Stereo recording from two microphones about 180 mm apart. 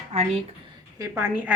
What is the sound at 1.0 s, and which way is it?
Speech, 10° right (ahead or behind).